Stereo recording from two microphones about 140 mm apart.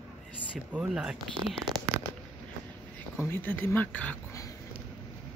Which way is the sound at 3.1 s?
15° left (ahead or behind).